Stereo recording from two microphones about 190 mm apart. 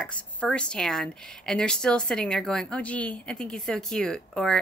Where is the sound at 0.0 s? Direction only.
5° left (ahead or behind).